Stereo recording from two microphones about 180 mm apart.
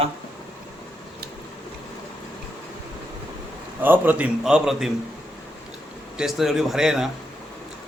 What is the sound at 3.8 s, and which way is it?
A man's voice, 10° right (ahead or behind).